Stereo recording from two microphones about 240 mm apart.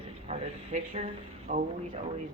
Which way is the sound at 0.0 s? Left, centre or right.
Right.